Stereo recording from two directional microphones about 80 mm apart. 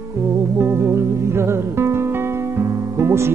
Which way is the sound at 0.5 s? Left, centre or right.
Right.